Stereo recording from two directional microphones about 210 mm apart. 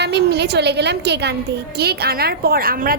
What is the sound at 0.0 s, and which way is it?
A woman's voice, 50° right (ahead or behind).